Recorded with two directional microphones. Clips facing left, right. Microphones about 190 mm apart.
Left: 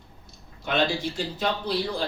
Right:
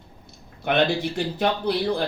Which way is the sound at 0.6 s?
60° right (ahead or behind).